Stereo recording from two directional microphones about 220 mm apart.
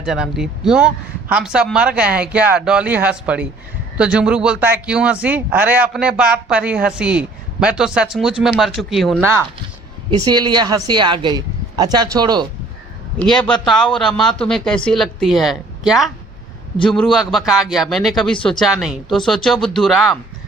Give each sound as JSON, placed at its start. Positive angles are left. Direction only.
{"t": 0.0, "sound": "speech", "side_deg": 0}
{"t": 10.1, "sound": "speech", "side_deg": -20}
{"t": 13.1, "sound": "speech", "side_deg": 5}